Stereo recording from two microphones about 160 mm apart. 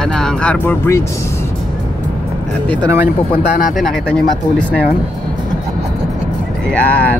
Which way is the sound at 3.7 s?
5° left (ahead or behind).